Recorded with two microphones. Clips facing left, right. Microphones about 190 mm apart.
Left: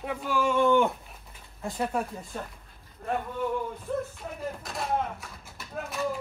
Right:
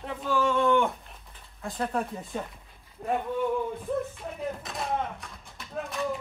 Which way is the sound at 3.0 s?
20° right (ahead or behind).